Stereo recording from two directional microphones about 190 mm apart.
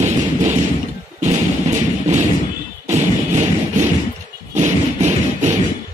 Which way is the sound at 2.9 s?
40° right (ahead or behind).